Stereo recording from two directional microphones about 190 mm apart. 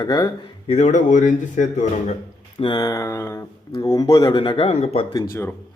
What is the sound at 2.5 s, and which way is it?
Speech, 25° left (ahead or behind).